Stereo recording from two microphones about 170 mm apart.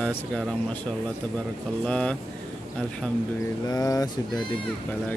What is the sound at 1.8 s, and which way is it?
Speech, 5° left (ahead or behind).